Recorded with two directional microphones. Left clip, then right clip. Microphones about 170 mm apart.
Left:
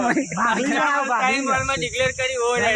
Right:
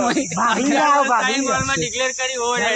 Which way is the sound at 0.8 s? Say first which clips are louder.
Right 7 dB; 60° right (ahead or behind).